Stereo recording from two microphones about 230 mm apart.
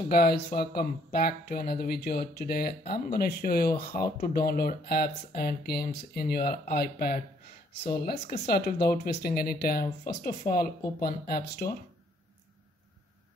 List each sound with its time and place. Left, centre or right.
0.1 s speech: left